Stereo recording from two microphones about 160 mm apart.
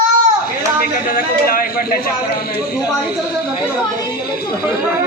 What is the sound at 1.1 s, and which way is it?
Speech, 65° left (ahead or behind).